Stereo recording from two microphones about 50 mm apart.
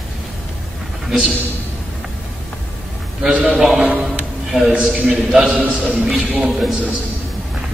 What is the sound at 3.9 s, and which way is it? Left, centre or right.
A man's voice, right.